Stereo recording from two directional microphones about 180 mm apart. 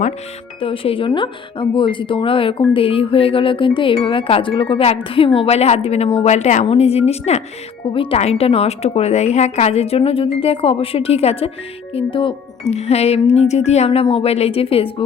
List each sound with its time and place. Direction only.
0.6 s a woman's voice: 30° left (ahead or behind)